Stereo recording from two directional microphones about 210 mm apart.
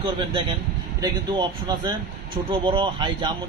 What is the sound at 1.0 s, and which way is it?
A man's voice, 20° right (ahead or behind).